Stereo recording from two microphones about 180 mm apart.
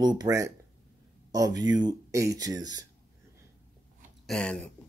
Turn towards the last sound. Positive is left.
turn(degrees=5)  # may be behind; listen again after turning